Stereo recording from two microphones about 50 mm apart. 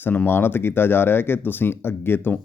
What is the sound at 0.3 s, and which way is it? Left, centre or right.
Speech, left.